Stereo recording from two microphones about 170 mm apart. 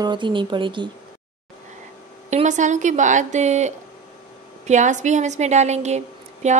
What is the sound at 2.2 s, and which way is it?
A woman's voice, 45° right (ahead or behind).